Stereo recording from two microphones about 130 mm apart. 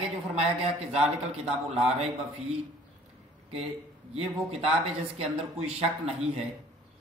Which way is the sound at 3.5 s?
50° right (ahead or behind).